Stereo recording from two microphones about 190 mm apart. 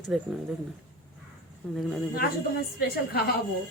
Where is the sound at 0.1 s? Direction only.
Centre (ahead or behind).